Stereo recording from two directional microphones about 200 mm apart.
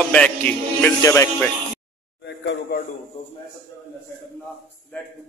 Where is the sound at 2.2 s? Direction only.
60° left (ahead or behind).